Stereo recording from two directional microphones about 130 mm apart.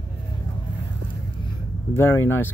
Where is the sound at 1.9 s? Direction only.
15° left (ahead or behind).